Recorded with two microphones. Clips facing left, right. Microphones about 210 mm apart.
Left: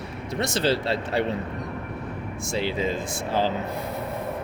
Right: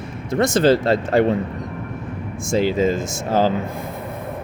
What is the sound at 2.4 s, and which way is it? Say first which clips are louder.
Speech: right 9 dB; 45° right (ahead or behind).